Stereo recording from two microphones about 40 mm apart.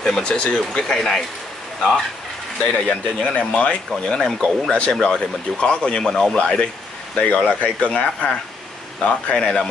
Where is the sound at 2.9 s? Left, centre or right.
Left.